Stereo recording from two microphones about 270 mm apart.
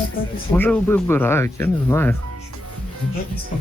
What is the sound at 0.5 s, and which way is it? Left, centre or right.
Speech, centre.